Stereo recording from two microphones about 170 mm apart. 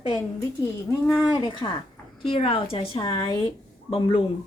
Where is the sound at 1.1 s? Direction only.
5° right (ahead or behind).